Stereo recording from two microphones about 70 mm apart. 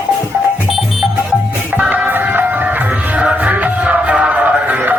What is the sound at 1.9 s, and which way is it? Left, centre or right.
Music, right.